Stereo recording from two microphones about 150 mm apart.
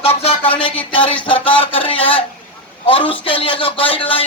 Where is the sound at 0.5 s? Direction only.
35° left (ahead or behind).